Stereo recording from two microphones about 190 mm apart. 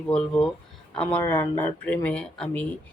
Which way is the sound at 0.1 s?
5° left (ahead or behind).